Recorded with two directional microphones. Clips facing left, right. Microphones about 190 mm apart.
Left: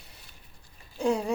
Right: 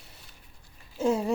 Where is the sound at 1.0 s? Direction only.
Centre (ahead or behind).